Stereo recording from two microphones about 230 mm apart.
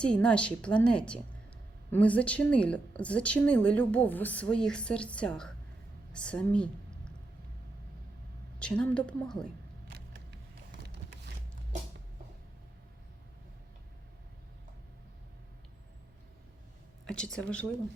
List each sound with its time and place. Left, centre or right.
0.0 s a woman's voice: centre
8.5 s a woman's voice: centre
9.9 s a sound: right
17.1 s a woman's voice: centre